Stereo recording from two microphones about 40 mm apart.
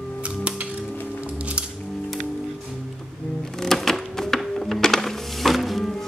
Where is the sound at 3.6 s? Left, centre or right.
Centre.